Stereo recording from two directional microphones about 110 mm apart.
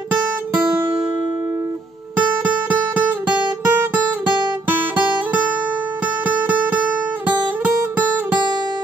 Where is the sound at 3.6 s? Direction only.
20° right (ahead or behind).